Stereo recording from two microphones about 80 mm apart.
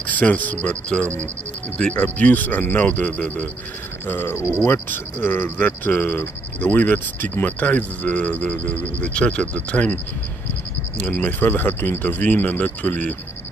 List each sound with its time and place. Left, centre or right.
0.0 s speech: left
11.0 s speech: centre